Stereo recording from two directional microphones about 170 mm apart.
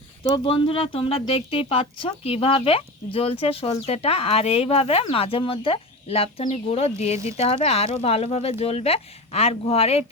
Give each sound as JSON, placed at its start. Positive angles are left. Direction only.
{"t": 0.3, "sound": "speech", "side_deg": 30}